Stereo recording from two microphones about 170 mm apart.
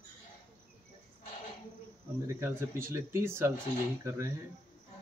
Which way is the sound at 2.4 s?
15° right (ahead or behind).